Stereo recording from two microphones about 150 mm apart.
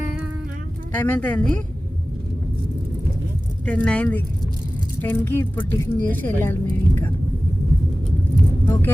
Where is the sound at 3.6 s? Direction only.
10° left (ahead or behind).